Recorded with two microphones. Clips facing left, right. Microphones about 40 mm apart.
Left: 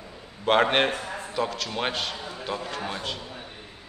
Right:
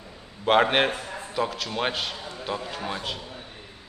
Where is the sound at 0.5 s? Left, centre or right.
Centre.